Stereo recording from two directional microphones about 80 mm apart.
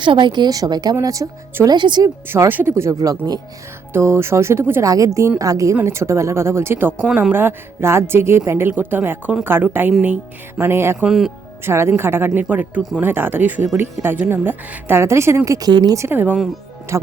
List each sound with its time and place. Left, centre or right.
0.0 s a woman's voice: right
0.5 s speech: right
1.0 s a woman's voice: right
1.6 s speech: right
2.5 s speech: right
2.9 s a woman's voice: right
3.9 s speech: right
4.8 s a woman's voice: right
5.8 s speech: right
11.0 s speech: centre
11.6 s speech: right
15.4 s a woman's voice: right
16.0 s speech: right
16.9 s speech: right